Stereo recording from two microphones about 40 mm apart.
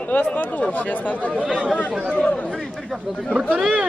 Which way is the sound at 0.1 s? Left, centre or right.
Left.